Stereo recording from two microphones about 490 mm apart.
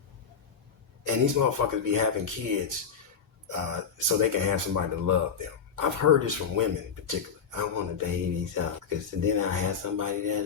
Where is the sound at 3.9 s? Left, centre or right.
Right.